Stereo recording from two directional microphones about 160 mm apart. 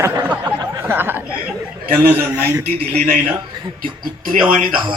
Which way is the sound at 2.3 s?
15° right (ahead or behind).